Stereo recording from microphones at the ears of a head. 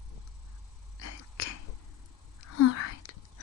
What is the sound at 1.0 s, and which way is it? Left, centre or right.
Sneeze, left.